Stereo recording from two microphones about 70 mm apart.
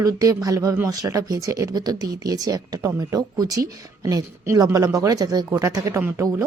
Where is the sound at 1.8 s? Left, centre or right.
Right.